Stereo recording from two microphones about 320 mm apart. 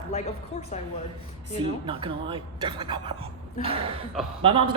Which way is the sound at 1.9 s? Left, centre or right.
Centre.